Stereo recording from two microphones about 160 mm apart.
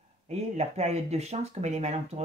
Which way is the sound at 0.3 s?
45° right (ahead or behind).